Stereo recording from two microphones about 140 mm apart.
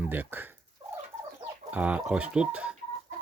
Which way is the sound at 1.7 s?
10° right (ahead or behind).